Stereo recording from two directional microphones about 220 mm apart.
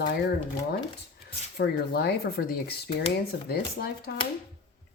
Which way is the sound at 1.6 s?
45° left (ahead or behind).